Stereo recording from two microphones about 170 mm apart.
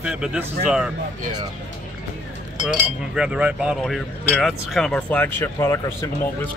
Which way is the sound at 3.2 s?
5° right (ahead or behind).